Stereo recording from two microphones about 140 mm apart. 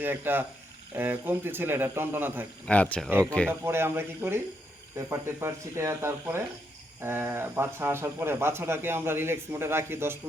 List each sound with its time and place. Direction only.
0.0 s speech: 15° right (ahead or behind)
2.6 s speech: 10° left (ahead or behind)
3.1 s speech: 15° right (ahead or behind)